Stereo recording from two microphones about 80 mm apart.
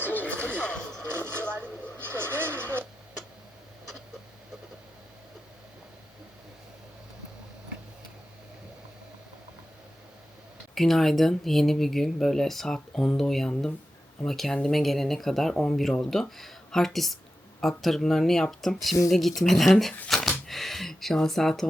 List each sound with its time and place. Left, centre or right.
0.1 s music: centre
1.0 s vehicle: right
10.8 s speech: centre
20.1 s a sound: centre
20.5 s speech: centre